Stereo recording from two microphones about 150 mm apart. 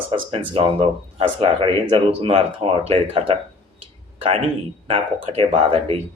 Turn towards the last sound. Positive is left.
turn(degrees=-40)  # may be behind; listen again after turning